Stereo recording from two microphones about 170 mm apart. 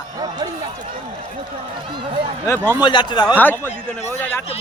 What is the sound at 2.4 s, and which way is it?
Speech, 15° left (ahead or behind).